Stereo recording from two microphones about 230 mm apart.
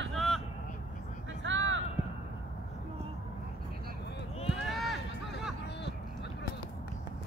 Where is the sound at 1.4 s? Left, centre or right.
Right.